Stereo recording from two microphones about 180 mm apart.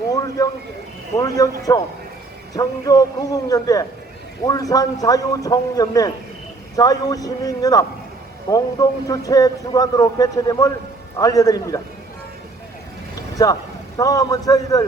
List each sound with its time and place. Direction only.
0.1 s a sound: 20° left (ahead or behind)
1.1 s a man's voice: 20° left (ahead or behind)
13.4 s a man's voice: 20° left (ahead or behind)